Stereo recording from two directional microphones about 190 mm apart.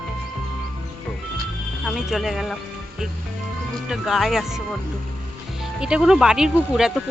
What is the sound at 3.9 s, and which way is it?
Speech, centre (ahead or behind).